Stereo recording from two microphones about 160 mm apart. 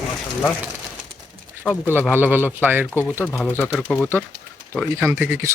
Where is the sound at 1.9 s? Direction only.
15° right (ahead or behind).